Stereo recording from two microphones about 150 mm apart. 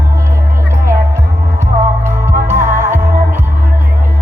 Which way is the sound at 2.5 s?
15° right (ahead or behind).